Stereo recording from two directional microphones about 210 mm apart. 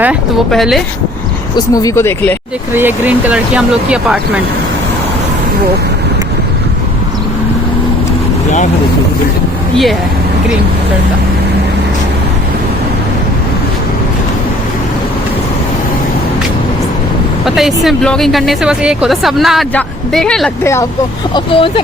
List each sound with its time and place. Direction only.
0.0 s a woman's voice: 5° right (ahead or behind)
1.5 s speech: 15° left (ahead or behind)
2.7 s a woman's voice: 10° right (ahead or behind)
17.4 s a woman's voice: centre (ahead or behind)
21.3 s speech: 25° left (ahead or behind)